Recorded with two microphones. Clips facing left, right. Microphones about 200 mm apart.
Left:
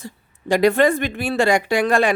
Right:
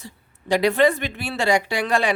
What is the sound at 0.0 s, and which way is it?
A woman's voice, 50° left (ahead or behind).